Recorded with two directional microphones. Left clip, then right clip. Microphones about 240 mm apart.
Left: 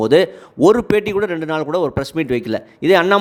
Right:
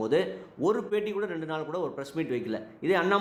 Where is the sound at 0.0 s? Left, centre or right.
Left.